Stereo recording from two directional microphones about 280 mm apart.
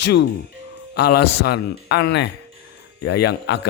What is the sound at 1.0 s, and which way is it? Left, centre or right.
Speech, left.